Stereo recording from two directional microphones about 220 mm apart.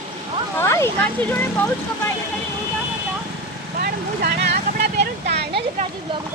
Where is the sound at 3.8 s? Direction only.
45° right (ahead or behind).